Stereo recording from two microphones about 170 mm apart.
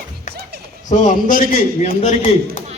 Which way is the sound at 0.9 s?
50° left (ahead or behind).